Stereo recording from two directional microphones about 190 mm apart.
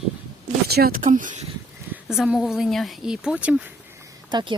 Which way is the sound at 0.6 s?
55° right (ahead or behind).